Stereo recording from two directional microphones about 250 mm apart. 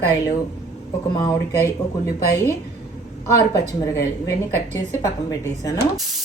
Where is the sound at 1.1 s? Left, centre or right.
Centre.